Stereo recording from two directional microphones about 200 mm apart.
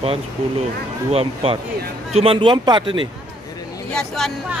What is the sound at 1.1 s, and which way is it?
Speech, 30° right (ahead or behind).